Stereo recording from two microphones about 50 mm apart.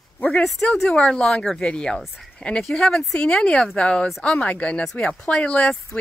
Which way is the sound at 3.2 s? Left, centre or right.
Left.